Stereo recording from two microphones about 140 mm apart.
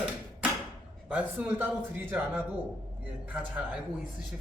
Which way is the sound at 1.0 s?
10° right (ahead or behind).